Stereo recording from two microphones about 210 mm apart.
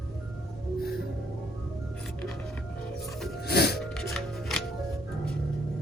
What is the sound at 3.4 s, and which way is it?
Music, 50° left (ahead or behind).